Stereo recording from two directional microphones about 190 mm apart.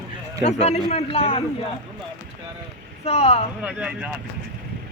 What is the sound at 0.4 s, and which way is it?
A man's voice, 35° left (ahead or behind).